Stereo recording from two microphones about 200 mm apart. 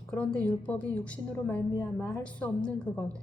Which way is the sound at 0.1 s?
5° left (ahead or behind).